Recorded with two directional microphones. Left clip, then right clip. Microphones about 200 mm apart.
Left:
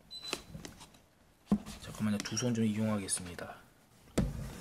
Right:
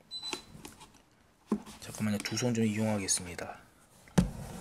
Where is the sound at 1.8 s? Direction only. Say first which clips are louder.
Right 2 dB; 10° right (ahead or behind).